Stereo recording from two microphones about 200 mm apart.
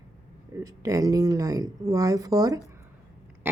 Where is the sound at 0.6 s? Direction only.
15° right (ahead or behind).